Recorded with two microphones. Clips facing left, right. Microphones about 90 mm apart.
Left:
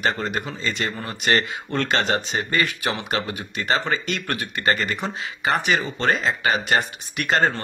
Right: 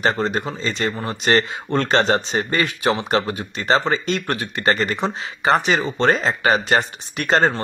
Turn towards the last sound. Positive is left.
turn(degrees=-25)  # may be behind; listen again after turning